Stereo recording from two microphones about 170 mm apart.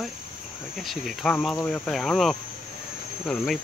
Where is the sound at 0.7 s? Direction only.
Centre (ahead or behind).